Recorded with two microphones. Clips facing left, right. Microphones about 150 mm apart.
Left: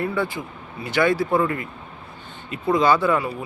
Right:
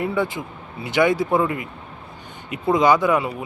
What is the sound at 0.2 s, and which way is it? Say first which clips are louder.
Speech: right 2 dB; 20° right (ahead or behind).